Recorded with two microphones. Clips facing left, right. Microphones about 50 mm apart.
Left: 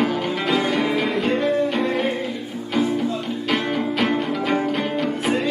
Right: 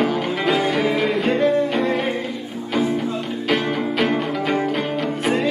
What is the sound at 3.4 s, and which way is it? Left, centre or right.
Music, centre.